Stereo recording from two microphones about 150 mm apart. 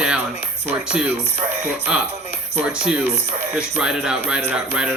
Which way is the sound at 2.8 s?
5° right (ahead or behind).